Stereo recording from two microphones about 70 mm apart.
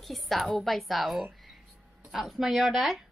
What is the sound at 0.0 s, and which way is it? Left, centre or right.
A woman's voice, centre.